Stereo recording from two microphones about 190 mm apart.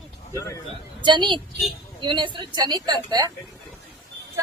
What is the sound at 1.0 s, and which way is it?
A woman's voice, 25° right (ahead or behind).